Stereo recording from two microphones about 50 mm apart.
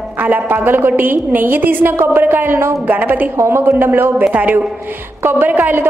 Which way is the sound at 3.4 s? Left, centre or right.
Right.